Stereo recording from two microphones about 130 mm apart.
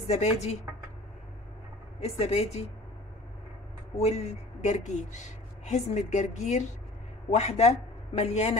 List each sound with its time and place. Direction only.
0.0 s a woman's voice: 55° left (ahead or behind)
2.0 s a woman's voice: 50° left (ahead or behind)
4.0 s a woman's voice: 60° left (ahead or behind)